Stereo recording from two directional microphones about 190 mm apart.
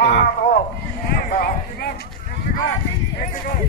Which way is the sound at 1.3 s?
45° left (ahead or behind).